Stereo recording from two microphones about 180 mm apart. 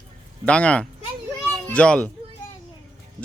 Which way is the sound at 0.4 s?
5° left (ahead or behind).